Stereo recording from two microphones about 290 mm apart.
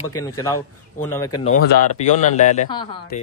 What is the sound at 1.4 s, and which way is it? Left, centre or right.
Speech, left.